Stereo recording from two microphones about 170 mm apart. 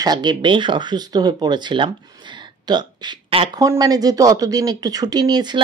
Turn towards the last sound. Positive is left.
turn(degrees=-25)  # may be behind; listen again after turning